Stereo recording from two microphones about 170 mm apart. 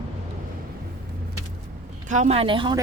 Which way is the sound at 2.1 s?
40° right (ahead or behind).